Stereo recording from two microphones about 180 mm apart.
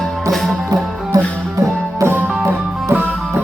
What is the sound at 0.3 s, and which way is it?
Music, centre (ahead or behind).